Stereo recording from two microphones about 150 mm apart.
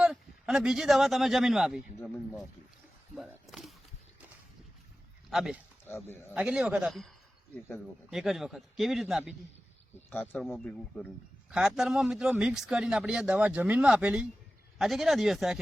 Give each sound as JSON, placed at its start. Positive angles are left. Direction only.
{"t": 0.0, "sound": "a man's voice", "side_deg": 0}
{"t": 3.4, "sound": "a sound", "side_deg": 0}
{"t": 5.3, "sound": "speech", "side_deg": -5}
{"t": 5.9, "sound": "speech", "side_deg": 15}
{"t": 6.3, "sound": "speech", "side_deg": -5}
{"t": 8.1, "sound": "speech", "side_deg": 0}
{"t": 10.1, "sound": "speech", "side_deg": 15}